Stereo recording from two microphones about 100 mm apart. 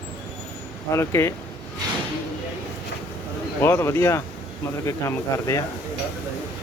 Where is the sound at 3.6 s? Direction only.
25° left (ahead or behind).